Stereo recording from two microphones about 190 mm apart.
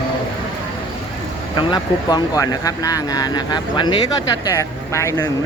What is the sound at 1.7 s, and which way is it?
Speech, 20° left (ahead or behind).